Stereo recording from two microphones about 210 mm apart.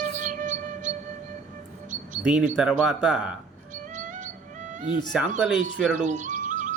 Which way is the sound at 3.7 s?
35° right (ahead or behind).